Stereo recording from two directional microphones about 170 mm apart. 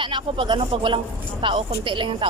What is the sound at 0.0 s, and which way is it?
Speech, 30° right (ahead or behind).